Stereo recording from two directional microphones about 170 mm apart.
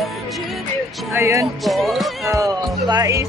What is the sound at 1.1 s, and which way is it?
Music, 15° right (ahead or behind).